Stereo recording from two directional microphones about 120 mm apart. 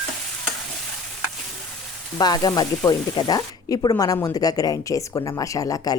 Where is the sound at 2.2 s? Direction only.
35° left (ahead or behind).